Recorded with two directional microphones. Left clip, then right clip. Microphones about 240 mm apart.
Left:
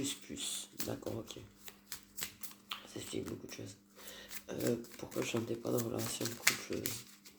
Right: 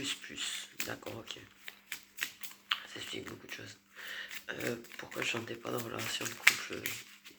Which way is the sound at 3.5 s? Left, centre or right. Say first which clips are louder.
Right 4 dB; left.